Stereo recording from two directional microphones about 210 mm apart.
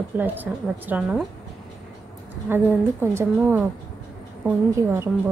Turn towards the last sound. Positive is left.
turn(degrees=-10)  # may be behind; listen again after turning